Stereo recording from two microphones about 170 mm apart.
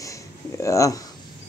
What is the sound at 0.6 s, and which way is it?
Speech, 20° left (ahead or behind).